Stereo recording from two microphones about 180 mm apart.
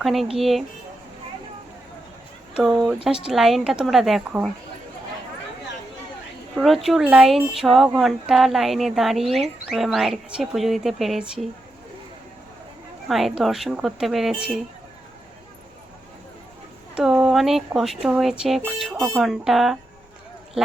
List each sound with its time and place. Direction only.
0.0 s speech: centre (ahead or behind)
2.8 s speech: 5° right (ahead or behind)
6.6 s speech: centre (ahead or behind)
13.1 s speech: centre (ahead or behind)
16.9 s speech: 5° right (ahead or behind)